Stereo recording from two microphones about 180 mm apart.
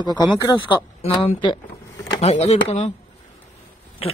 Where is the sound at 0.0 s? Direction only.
25° left (ahead or behind).